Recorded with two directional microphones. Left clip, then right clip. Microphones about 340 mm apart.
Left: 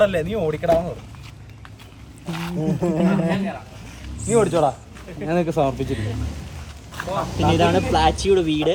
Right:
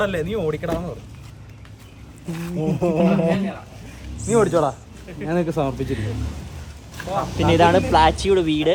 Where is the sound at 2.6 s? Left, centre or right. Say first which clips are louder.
Right 3 dB; right.